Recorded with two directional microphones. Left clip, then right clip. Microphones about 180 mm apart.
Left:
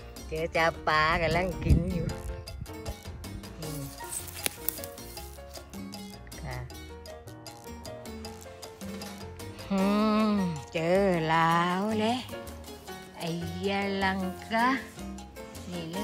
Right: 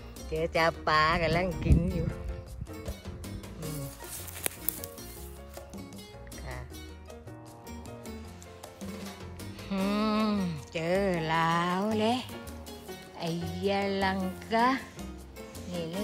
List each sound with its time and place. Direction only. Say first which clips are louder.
0.3 s speech: even; 5° right (ahead or behind)
9.7 s music: left 3 dB; centre (ahead or behind)
13.2 s speech: right 1 dB; centre (ahead or behind)